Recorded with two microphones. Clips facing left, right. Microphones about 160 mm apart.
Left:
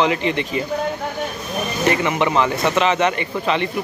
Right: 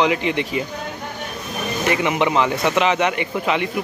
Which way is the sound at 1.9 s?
15° right (ahead or behind).